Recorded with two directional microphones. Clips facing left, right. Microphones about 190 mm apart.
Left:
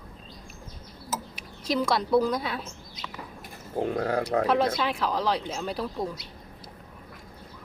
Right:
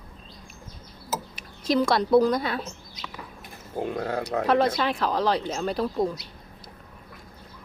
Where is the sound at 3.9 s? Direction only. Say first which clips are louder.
Left 2 dB; 35° left (ahead or behind).